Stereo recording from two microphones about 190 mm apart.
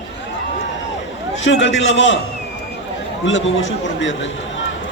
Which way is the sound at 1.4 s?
75° left (ahead or behind).